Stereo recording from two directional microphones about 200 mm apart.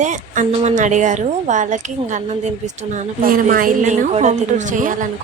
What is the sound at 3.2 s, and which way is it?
Speech, 45° right (ahead or behind).